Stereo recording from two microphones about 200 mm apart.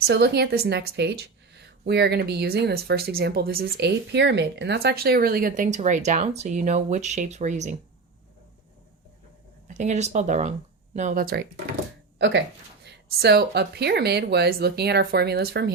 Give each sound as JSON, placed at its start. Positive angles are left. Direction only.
{"t": 0.1, "sound": "speech", "side_deg": -55}
{"t": 9.6, "sound": "speech", "side_deg": -35}
{"t": 12.8, "sound": "speech", "side_deg": -55}